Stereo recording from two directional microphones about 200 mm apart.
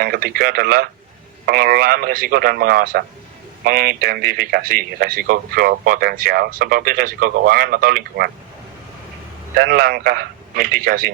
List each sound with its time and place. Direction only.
0.0 s speech: 50° right (ahead or behind)
9.6 s speech: 50° right (ahead or behind)